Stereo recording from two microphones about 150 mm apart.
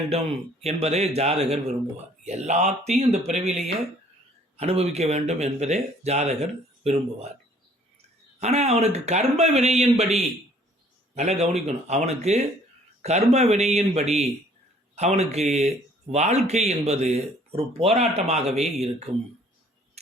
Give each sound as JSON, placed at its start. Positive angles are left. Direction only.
{"t": 0.1, "sound": "speech", "side_deg": -45}
{"t": 8.4, "sound": "speech", "side_deg": -45}